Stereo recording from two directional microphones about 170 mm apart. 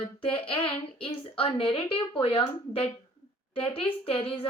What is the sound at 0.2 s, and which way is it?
A woman's voice, 30° left (ahead or behind).